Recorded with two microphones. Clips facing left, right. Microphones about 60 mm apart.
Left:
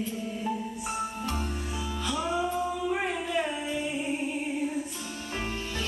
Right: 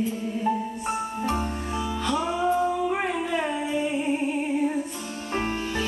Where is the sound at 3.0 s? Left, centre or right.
Centre.